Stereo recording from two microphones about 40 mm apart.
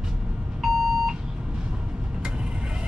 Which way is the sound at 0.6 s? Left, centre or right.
Centre.